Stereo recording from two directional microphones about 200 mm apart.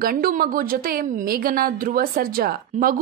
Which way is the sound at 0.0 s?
45° right (ahead or behind).